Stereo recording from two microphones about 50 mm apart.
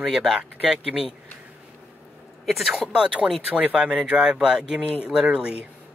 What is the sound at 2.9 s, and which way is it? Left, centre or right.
Speech, centre.